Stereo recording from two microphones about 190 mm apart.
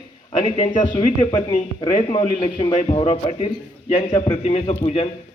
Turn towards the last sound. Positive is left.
turn(degrees=30)  # may be behind; listen again after turning